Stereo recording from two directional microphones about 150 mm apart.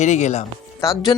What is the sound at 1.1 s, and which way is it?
Speech, 30° left (ahead or behind).